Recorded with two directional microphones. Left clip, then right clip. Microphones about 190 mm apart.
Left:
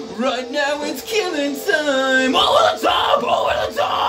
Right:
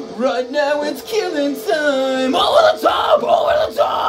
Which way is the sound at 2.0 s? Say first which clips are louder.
Left 1 dB; 20° left (ahead or behind).